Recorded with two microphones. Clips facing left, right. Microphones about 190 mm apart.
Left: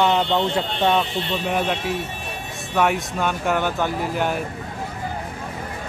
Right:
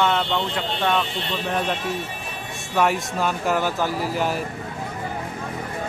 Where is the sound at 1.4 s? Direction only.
5° left (ahead or behind).